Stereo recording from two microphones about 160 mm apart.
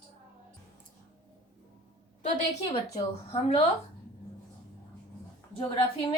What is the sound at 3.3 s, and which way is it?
Speech, 40° left (ahead or behind).